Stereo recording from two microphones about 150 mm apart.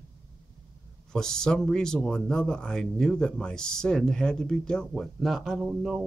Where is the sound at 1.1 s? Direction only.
5° left (ahead or behind).